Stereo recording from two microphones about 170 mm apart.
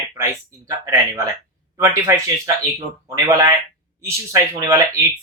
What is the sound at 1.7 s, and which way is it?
Speech, 15° right (ahead or behind).